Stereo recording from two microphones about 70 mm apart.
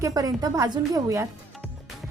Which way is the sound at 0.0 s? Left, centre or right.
Right.